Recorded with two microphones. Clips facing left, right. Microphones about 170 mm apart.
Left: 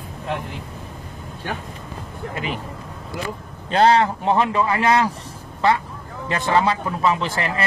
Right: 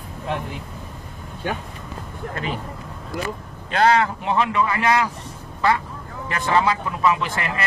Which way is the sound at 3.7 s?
30° left (ahead or behind).